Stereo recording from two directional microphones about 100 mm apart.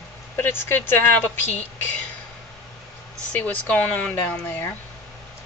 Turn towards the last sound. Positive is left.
turn(degrees=15)  # may be behind; listen again after turning